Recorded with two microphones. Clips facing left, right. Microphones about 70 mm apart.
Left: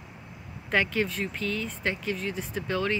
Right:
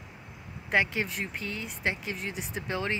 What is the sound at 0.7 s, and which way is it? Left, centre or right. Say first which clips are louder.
Speech: left 1 dB; centre.